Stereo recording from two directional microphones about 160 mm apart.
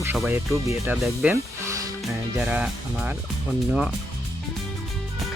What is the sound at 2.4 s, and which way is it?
Speech, 10° right (ahead or behind).